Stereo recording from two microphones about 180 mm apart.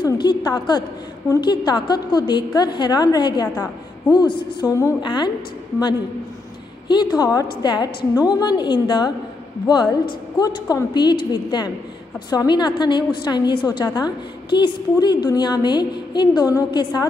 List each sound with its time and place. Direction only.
0.0 s a woman's voice: 25° left (ahead or behind)
6.9 s a woman's voice: 25° left (ahead or behind)